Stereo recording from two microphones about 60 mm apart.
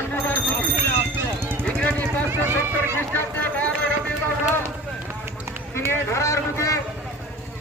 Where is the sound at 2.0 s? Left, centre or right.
Right.